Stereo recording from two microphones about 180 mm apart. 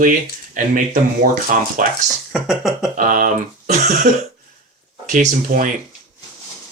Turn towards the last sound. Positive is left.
turn(degrees=-45)  # may be behind; listen again after turning